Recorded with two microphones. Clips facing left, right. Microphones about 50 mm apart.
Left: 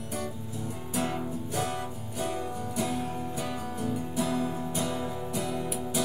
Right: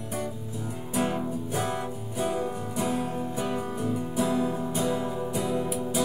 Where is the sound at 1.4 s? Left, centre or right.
Right.